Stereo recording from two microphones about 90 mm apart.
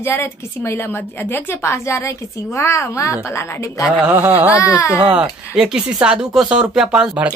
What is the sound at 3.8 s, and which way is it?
Speech, 15° right (ahead or behind).